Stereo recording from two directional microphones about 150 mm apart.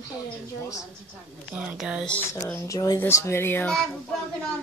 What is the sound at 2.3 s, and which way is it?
Speech, 20° left (ahead or behind).